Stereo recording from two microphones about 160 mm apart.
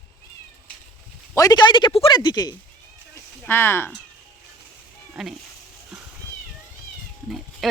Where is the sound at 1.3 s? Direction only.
20° left (ahead or behind).